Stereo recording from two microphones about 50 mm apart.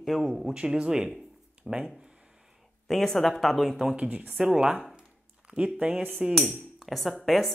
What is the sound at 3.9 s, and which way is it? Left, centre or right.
Speech, right.